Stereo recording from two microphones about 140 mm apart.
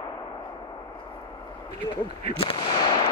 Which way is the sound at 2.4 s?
40° left (ahead or behind).